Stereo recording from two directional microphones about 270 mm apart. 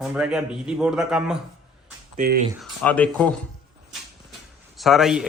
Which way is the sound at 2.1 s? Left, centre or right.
Right.